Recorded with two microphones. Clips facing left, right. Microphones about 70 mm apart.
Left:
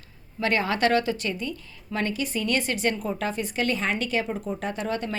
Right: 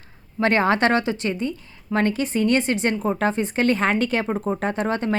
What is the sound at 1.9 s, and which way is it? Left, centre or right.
Speech, right.